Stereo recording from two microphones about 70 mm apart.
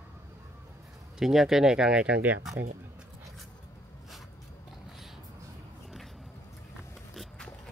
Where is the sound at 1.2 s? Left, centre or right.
Centre.